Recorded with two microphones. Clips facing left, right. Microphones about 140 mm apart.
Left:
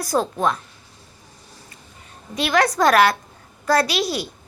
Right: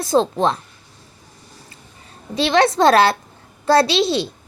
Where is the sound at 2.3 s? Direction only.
30° right (ahead or behind).